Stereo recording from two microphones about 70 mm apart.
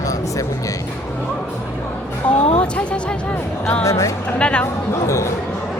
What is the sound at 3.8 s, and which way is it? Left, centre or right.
Speech, left.